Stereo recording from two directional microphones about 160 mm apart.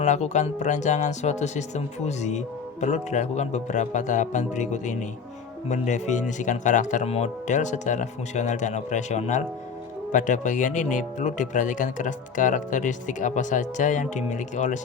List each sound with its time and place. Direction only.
0.0 s speech: 45° left (ahead or behind)